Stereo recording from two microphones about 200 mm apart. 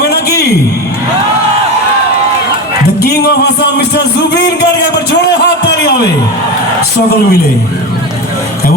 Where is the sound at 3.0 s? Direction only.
55° left (ahead or behind).